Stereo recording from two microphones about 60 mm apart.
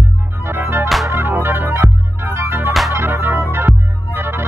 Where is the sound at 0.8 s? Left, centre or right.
Centre.